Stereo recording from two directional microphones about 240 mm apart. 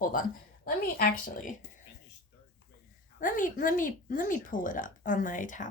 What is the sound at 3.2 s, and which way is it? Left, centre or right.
Speech, left.